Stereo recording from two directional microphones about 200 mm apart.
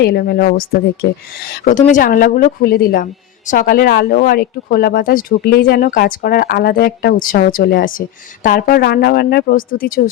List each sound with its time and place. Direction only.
0.0 s a woman's voice: 55° left (ahead or behind)
1.6 s a woman's voice: 40° left (ahead or behind)